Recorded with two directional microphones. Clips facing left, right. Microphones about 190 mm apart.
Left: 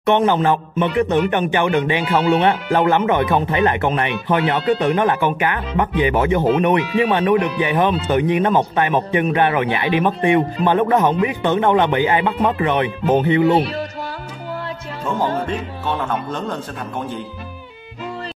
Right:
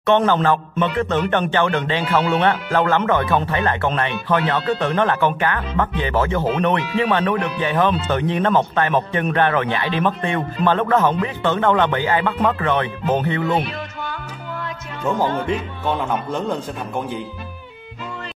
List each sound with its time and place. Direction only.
0.0 s a man's voice: 15° left (ahead or behind)
13.5 s a sound: 35° left (ahead or behind)
16.3 s a man's voice: 10° right (ahead or behind)